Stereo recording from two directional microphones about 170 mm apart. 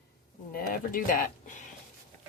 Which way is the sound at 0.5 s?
55° left (ahead or behind).